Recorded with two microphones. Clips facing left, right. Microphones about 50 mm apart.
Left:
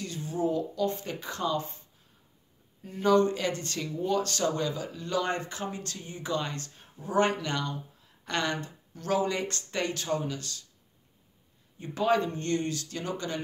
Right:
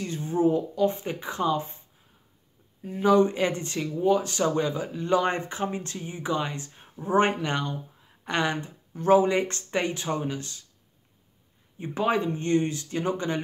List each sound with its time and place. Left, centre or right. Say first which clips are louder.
0.0 s speech: right 6 dB; right
2.8 s speech: right 3 dB; centre
11.8 s speech: right 1 dB; right